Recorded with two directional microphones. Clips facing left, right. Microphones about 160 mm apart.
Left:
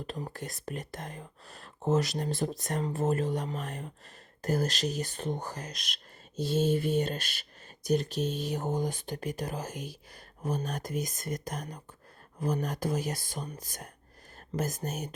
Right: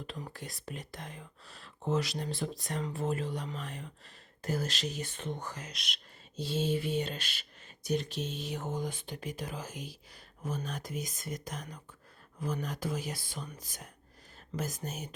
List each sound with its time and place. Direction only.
0.1 s speech: 40° left (ahead or behind)